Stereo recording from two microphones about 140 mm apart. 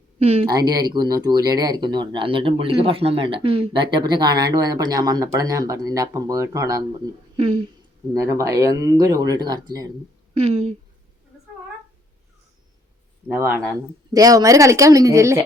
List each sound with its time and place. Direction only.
0.2 s speech: 45° right (ahead or behind)
0.9 s speech: 30° right (ahead or behind)
7.3 s speech: 40° right (ahead or behind)
8.2 s speech: 20° right (ahead or behind)
10.3 s speech: 45° right (ahead or behind)
13.2 s speech: 15° right (ahead or behind)